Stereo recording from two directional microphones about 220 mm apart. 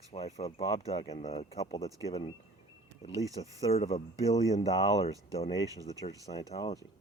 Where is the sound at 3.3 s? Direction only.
30° left (ahead or behind).